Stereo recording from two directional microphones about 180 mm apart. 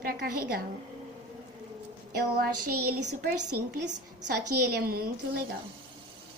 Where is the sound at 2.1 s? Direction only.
55° right (ahead or behind).